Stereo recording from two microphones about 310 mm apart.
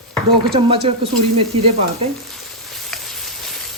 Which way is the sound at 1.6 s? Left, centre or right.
Centre.